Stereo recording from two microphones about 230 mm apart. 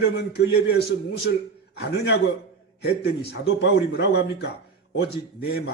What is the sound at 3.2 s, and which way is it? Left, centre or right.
A man's voice, left.